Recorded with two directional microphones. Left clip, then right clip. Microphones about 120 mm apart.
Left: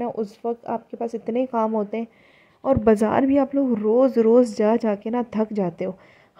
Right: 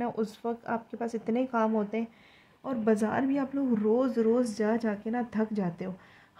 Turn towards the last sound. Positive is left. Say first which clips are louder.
# left 8 dB
turn(degrees=55)  # may be behind; listen again after turning